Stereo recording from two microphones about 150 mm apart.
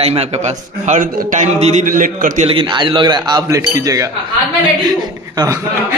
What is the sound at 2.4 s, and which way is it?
Speech, 35° right (ahead or behind).